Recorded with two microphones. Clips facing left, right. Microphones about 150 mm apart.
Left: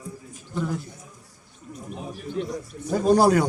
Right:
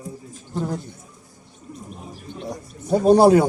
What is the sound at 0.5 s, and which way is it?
Speech, 35° right (ahead or behind).